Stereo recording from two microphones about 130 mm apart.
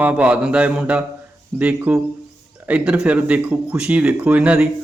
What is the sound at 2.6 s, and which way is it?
A man's voice, 10° right (ahead or behind).